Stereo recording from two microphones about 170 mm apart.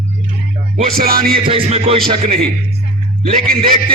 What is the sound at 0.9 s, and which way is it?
Music, 60° right (ahead or behind).